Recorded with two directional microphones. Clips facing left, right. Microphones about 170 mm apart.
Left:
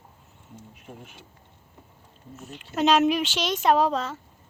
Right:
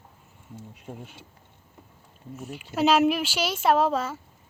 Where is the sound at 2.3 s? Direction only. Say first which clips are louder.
Right 1 dB; 10° right (ahead or behind).